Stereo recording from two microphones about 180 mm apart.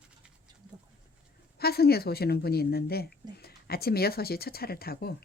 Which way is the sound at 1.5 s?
60° left (ahead or behind).